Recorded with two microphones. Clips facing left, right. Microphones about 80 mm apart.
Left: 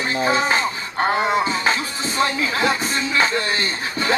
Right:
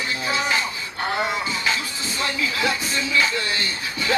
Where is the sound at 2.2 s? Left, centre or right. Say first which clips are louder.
Left 5 dB; left.